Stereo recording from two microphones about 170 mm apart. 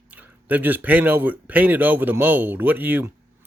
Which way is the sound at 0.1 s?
10° right (ahead or behind).